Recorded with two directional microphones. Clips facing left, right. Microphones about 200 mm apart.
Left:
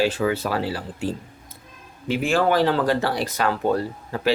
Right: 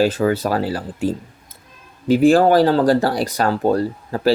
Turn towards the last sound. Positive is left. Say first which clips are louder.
# right 5 dB
turn(degrees=-35)  # may be behind; listen again after turning